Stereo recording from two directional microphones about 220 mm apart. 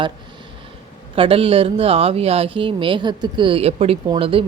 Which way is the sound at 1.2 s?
25° right (ahead or behind).